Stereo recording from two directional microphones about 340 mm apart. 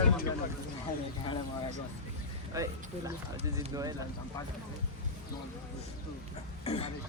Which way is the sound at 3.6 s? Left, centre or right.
Centre.